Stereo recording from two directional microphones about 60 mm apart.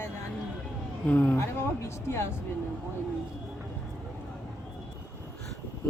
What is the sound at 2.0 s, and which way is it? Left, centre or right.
Speech, left.